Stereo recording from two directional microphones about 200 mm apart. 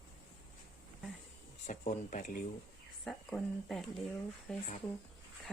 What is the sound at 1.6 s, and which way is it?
Speech, 40° left (ahead or behind).